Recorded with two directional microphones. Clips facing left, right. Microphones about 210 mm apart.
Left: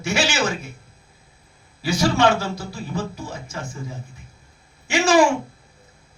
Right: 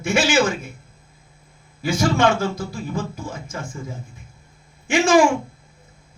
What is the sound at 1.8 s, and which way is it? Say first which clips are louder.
A man's voice: even; 50° right (ahead or behind).